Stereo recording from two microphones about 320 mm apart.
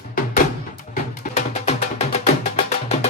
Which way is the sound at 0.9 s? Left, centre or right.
Left.